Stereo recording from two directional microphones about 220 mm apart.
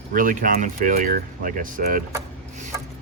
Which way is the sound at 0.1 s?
40° right (ahead or behind).